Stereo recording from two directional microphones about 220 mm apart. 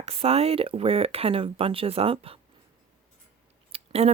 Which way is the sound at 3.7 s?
30° right (ahead or behind).